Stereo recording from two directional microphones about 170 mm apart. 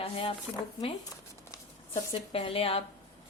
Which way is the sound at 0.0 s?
35° left (ahead or behind).